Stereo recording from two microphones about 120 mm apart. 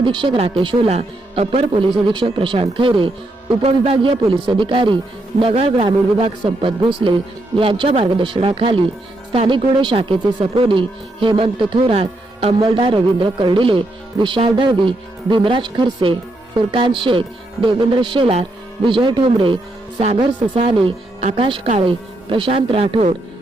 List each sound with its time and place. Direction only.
0.0 s speech: 45° right (ahead or behind)
12.6 s speech: 45° right (ahead or behind)